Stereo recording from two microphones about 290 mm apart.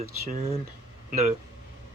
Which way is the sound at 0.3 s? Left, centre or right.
Right.